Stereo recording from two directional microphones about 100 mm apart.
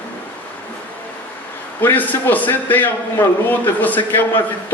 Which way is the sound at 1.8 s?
20° left (ahead or behind).